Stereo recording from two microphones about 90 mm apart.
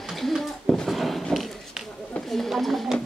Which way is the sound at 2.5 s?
Centre (ahead or behind).